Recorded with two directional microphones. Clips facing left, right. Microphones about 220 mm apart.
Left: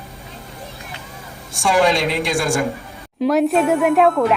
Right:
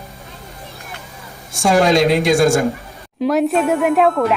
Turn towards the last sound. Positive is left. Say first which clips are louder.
# even
turn(degrees=0)  # may be behind; listen again after turning